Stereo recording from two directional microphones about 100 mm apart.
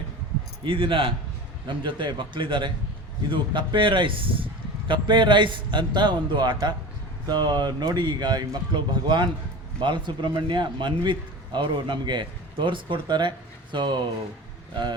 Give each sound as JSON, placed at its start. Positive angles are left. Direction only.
{"t": 0.6, "sound": "a man's voice", "side_deg": -60}